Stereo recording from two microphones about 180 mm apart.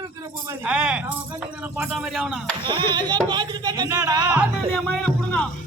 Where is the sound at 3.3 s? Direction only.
20° right (ahead or behind).